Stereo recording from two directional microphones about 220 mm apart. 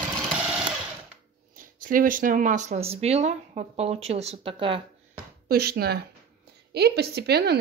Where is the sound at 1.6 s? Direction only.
40° right (ahead or behind); by 4.8 s 25° right (ahead or behind).